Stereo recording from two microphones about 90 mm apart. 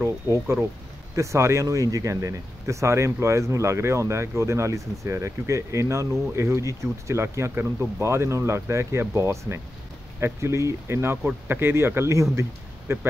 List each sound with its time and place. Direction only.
0.0 s a man's voice: 30° right (ahead or behind)